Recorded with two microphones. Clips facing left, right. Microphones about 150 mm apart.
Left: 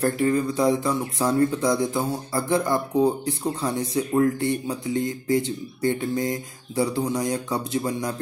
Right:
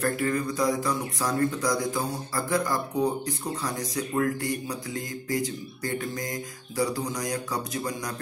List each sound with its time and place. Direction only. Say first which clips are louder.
0.0 s speech: left 5 dB; 25° left (ahead or behind)